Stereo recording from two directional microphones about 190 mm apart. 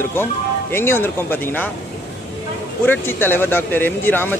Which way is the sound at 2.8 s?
10° left (ahead or behind).